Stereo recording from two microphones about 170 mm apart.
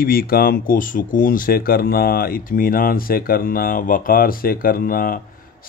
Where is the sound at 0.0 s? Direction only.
60° left (ahead or behind).